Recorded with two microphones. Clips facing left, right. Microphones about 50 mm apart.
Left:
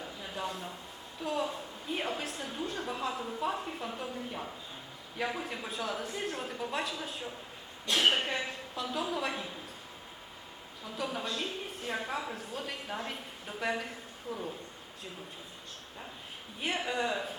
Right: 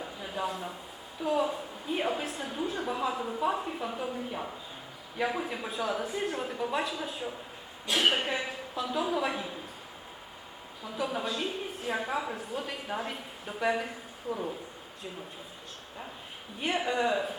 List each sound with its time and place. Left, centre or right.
0.0 s a sound: centre
1.2 s a woman's voice: centre
10.8 s a woman's voice: centre
14.3 s speech: centre
16.6 s a woman's voice: centre